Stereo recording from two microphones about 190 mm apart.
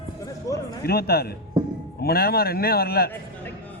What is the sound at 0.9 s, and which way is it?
Speech, 55° left (ahead or behind).